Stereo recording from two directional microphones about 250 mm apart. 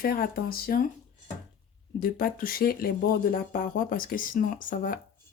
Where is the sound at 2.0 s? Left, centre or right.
Left.